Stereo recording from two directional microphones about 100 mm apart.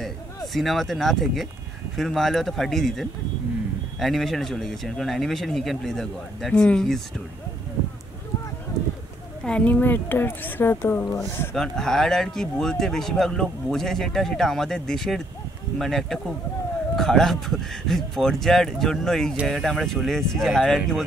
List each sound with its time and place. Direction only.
0.0 s speech: centre (ahead or behind)
9.4 s a woman's voice: 10° left (ahead or behind)
11.5 s speech: 5° left (ahead or behind)